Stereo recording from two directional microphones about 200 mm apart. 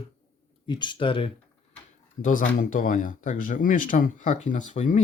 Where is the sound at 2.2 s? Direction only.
40° left (ahead or behind).